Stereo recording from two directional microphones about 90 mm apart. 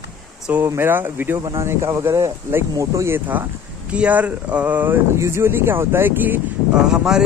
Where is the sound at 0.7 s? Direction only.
25° right (ahead or behind).